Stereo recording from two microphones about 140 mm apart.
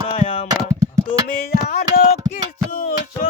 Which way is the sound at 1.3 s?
90° left.